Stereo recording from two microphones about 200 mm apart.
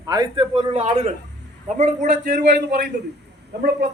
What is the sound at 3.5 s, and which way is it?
Speech, 55° right (ahead or behind).